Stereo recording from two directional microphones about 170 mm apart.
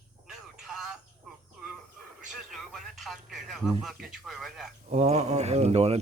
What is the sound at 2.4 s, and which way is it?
Radio, centre (ahead or behind).